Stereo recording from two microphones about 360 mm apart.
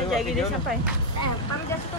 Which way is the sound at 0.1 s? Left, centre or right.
Centre.